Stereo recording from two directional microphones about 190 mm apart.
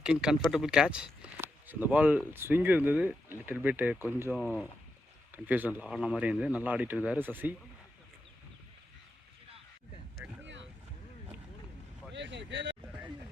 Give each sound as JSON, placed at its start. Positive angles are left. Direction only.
{"t": 0.0, "sound": "speech", "side_deg": -5}
{"t": 4.4, "sound": "speech", "side_deg": 5}
{"t": 5.3, "sound": "speech", "side_deg": -10}
{"t": 10.4, "sound": "boat", "side_deg": -70}
{"t": 12.1, "sound": "vehicle", "side_deg": -65}